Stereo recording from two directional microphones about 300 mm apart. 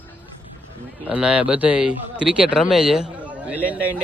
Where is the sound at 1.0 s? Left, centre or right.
Centre.